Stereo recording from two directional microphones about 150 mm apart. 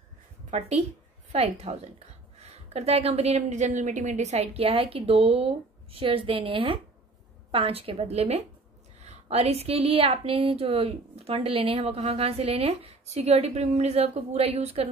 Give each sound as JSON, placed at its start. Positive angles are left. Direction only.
{"t": 0.5, "sound": "a woman's voice", "side_deg": -50}